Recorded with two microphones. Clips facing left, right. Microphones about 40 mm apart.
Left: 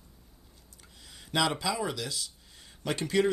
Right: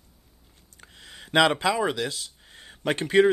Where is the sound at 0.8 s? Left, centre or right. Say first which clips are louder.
Right 7 dB; right.